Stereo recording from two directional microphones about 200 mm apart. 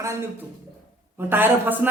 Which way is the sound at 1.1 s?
10° right (ahead or behind).